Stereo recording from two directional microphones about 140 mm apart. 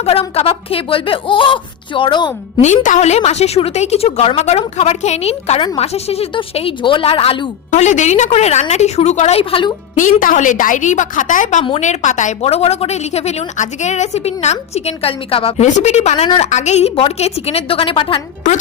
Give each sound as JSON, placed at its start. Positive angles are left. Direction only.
{"t": 0.0, "sound": "speech", "side_deg": 45}
{"t": 2.6, "sound": "a woman's voice", "side_deg": 60}
{"t": 7.7, "sound": "a woman's voice", "side_deg": 60}
{"t": 10.0, "sound": "a woman's voice", "side_deg": 70}
{"t": 15.6, "sound": "a woman's voice", "side_deg": 50}
{"t": 16.5, "sound": "a woman's voice", "side_deg": 55}